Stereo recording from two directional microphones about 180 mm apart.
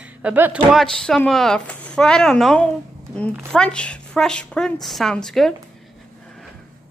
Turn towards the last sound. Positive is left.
turn(degrees=0)  # may be behind; listen again after turning